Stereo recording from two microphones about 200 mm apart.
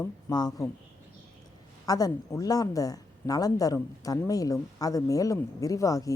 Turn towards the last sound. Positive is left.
turn(degrees=15)  # may be behind; listen again after turning